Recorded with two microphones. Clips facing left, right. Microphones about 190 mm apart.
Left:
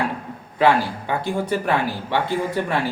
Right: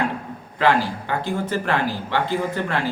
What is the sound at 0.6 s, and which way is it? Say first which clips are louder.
Speech: left 2 dB; 15° left (ahead or behind).